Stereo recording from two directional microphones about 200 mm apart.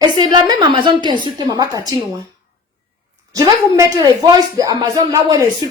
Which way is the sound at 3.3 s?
20° right (ahead or behind).